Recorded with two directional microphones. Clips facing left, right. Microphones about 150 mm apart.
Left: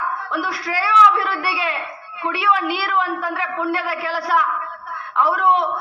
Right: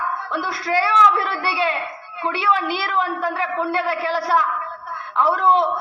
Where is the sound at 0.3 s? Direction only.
25° right (ahead or behind).